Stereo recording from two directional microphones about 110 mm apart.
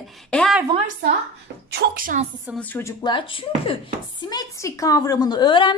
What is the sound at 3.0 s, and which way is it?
Speech, 50° left (ahead or behind).